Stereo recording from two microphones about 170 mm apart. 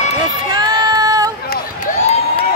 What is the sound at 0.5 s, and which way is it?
Child singing, 25° right (ahead or behind).